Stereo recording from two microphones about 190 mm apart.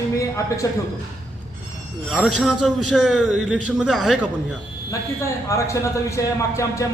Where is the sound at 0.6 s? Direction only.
15° left (ahead or behind).